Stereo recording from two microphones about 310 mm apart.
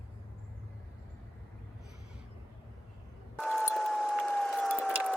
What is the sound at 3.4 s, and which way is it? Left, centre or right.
Siren, centre.